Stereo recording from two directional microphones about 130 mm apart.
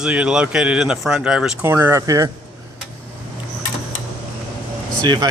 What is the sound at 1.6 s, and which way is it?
Speech, 15° right (ahead or behind).